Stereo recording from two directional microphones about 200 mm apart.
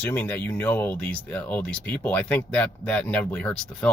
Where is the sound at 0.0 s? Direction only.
10° left (ahead or behind).